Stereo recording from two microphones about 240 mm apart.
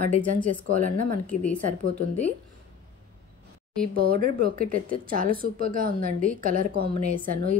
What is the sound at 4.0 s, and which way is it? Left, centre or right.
A woman's voice, right.